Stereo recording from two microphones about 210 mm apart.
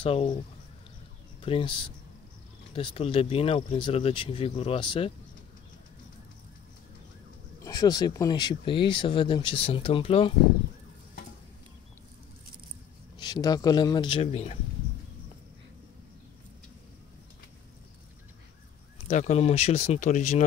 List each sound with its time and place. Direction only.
0.0 s speech: 25° left (ahead or behind)
1.4 s speech: 25° left (ahead or behind)
2.7 s speech: 25° left (ahead or behind)
7.6 s speech: 20° left (ahead or behind)
13.2 s speech: 20° left (ahead or behind)
19.0 s speech: 35° left (ahead or behind)